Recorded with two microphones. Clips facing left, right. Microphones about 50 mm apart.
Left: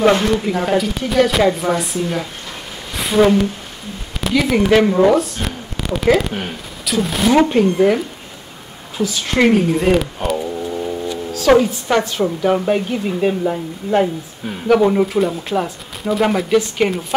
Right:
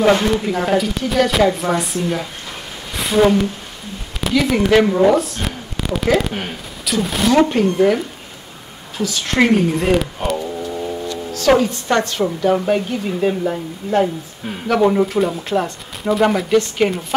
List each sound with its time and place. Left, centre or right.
0.0 s speech: centre
2.9 s a sound: centre
4.2 s speech: centre
9.4 s speech: centre